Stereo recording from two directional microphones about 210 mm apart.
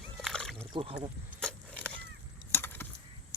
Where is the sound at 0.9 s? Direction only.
5° left (ahead or behind).